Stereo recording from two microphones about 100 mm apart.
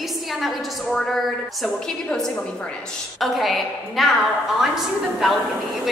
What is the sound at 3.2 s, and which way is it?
A woman's voice, centre (ahead or behind).